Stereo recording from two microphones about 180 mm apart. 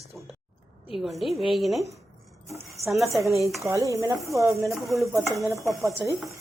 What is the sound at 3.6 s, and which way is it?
Dishes, 15° right (ahead or behind).